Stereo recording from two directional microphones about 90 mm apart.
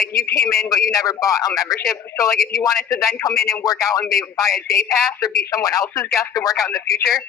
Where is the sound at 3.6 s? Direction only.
40° left (ahead or behind).